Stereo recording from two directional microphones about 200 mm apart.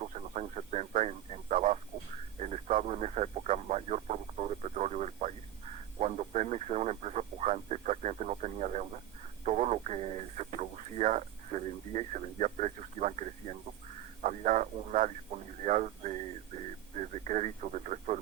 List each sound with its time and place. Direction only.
0.1 s radio: 35° right (ahead or behind)
14.2 s radio: 40° right (ahead or behind)
15.6 s a sound: 40° right (ahead or behind)
17.2 s radio: 35° right (ahead or behind)